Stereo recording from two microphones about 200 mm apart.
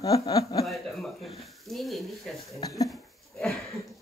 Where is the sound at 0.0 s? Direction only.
15° left (ahead or behind).